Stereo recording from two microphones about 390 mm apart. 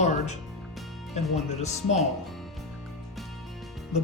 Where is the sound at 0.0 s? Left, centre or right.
Centre.